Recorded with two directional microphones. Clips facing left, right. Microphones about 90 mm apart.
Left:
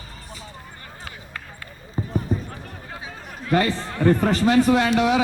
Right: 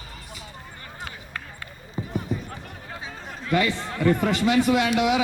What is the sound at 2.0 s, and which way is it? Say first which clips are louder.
Basketball bounce: left 3 dB; 40° left (ahead or behind).